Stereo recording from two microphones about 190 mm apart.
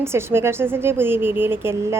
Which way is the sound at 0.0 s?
15° right (ahead or behind).